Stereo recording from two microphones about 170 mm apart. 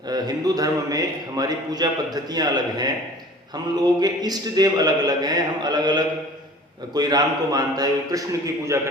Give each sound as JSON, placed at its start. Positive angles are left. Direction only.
{"t": 0.1, "sound": "a man's voice", "side_deg": -20}